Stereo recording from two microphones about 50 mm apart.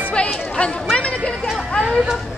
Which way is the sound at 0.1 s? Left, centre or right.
Left.